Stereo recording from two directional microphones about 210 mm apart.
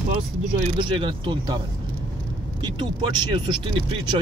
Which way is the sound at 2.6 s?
20° right (ahead or behind).